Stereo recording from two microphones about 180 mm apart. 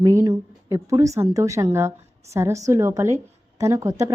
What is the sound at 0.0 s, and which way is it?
A woman's voice, 15° right (ahead or behind).